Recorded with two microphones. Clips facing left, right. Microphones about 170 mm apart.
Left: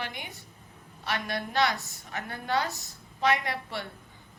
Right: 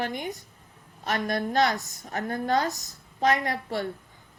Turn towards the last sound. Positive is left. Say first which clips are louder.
# right 6 dB
turn(degrees=-45)  # may be behind; listen again after turning